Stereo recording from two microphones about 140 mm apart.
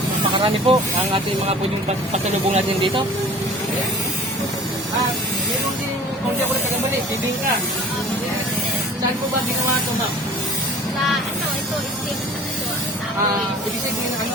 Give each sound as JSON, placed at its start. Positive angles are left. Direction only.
{"t": 0.3, "sound": "speech", "side_deg": -40}
{"t": 2.1, "sound": "speech", "side_deg": -50}